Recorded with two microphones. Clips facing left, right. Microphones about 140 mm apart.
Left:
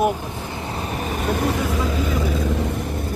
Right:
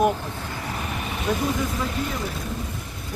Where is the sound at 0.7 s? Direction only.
35° left (ahead or behind).